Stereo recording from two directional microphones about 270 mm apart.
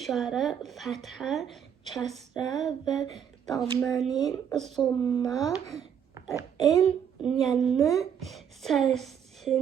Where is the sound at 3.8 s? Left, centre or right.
Centre.